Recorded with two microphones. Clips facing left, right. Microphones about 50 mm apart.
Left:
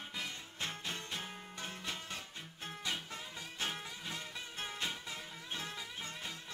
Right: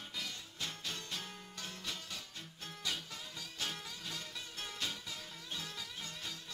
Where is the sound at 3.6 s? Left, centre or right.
Left.